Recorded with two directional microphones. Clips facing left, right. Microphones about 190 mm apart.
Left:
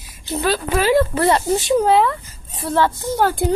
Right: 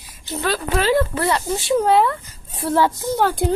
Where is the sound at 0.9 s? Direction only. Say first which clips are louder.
Left 4 dB; 20° left (ahead or behind).